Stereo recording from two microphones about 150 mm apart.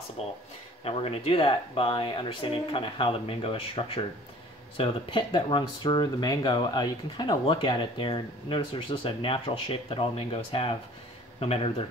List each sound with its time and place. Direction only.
0.2 s speech: 45° left (ahead or behind)